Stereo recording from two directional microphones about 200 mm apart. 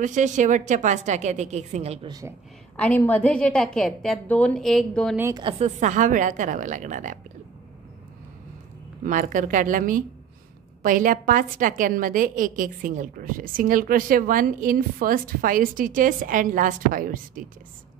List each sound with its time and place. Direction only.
0.0 s a woman's voice: 40° right (ahead or behind)
2.8 s a woman's voice: 10° left (ahead or behind)
5.1 s a woman's voice: 10° right (ahead or behind)
5.4 s a woman's voice: 25° right (ahead or behind)
5.8 s a woman's voice: 40° right (ahead or behind)
9.0 s a woman's voice: 40° right (ahead or behind)